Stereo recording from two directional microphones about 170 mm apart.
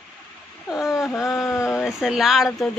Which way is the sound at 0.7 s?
Centre (ahead or behind).